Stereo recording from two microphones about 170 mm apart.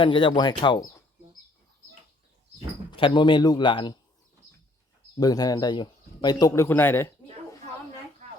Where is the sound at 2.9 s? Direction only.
30° left (ahead or behind).